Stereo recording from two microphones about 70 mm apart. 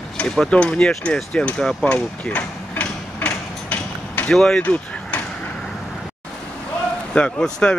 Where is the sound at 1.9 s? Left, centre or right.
Centre.